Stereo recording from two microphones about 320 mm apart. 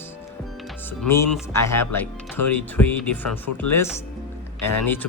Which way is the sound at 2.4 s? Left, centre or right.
Left.